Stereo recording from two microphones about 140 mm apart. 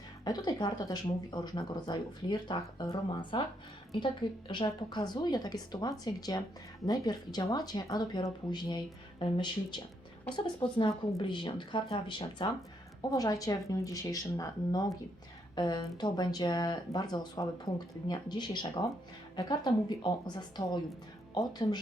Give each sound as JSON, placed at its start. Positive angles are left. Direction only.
{"t": 0.3, "sound": "speech", "side_deg": 30}